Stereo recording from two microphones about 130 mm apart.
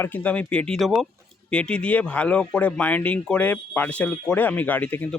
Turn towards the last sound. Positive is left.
turn(degrees=15)  # may be behind; listen again after turning